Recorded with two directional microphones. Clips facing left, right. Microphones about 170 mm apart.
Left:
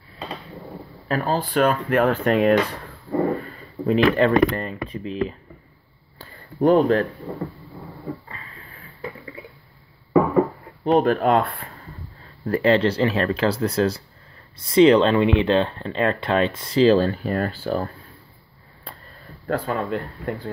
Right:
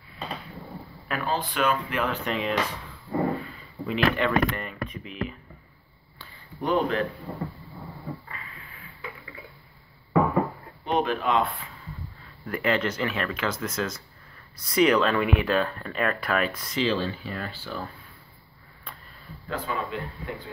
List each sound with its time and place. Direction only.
1.0 s speech: 40° left (ahead or behind)
6.1 s a sound: 45° left (ahead or behind)
8.7 s a sound: 35° left (ahead or behind)
10.8 s speech: 45° left (ahead or behind)
12.4 s speech: 35° left (ahead or behind)
16.8 s speech: 45° left (ahead or behind)
19.4 s speech: 50° left (ahead or behind)